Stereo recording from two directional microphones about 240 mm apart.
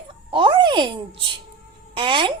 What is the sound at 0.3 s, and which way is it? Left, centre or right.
Music, centre.